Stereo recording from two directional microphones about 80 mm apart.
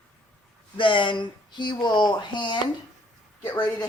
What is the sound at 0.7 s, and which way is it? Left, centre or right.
Speech, left.